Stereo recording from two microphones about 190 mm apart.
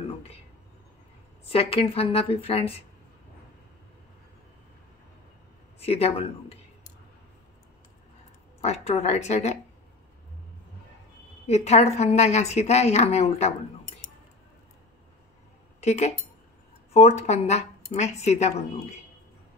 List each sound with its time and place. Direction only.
1.5 s a woman's voice: 30° left (ahead or behind)
5.8 s speech: 30° left (ahead or behind)
8.5 s a woman's voice: 35° left (ahead or behind)
11.4 s a woman's voice: 35° left (ahead or behind)
15.8 s a woman's voice: 35° left (ahead or behind)